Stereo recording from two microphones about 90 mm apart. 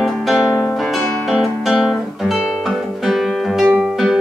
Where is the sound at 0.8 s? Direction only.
Centre (ahead or behind).